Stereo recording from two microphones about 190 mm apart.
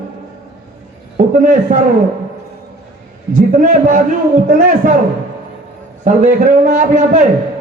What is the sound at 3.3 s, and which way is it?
A man's voice, 45° right (ahead or behind).